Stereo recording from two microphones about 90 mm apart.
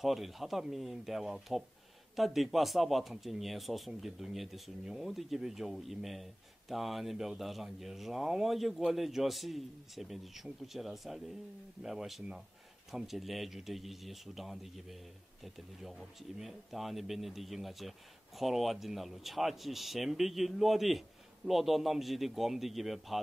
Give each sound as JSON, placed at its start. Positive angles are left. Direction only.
{"t": 0.0, "sound": "speech", "side_deg": 0}